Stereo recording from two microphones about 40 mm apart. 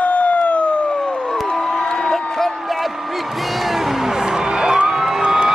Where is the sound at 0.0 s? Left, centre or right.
Left.